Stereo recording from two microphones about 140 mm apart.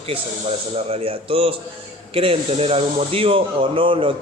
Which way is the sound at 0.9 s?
40° right (ahead or behind).